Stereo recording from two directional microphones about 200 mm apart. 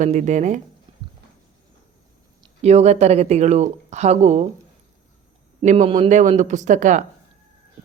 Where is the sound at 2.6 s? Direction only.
35° right (ahead or behind).